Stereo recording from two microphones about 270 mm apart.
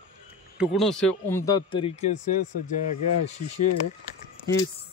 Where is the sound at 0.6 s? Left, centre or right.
Centre.